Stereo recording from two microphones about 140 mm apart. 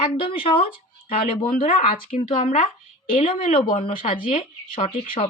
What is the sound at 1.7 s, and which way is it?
Speech, 45° left (ahead or behind).